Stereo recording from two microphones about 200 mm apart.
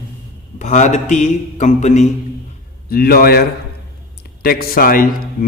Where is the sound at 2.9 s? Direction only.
50° left (ahead or behind).